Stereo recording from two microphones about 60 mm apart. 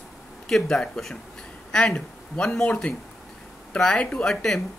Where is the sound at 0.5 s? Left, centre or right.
Centre.